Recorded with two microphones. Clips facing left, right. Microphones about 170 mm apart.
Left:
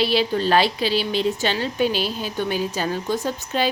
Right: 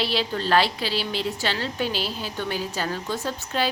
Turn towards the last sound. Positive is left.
turn(degrees=15)  # may be behind; listen again after turning